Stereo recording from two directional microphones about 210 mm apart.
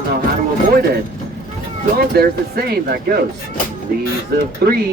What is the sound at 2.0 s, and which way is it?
Speech, 45° right (ahead or behind).